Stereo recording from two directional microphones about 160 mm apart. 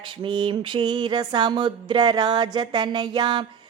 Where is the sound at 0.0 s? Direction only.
30° right (ahead or behind).